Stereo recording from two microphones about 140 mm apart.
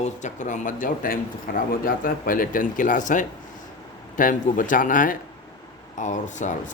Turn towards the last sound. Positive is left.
turn(degrees=60)  # may be behind; listen again after turning